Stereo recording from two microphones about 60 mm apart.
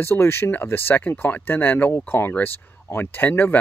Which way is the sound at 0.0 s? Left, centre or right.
Left.